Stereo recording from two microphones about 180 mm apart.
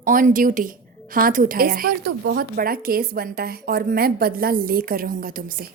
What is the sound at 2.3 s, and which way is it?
A woman's voice, 70° right (ahead or behind).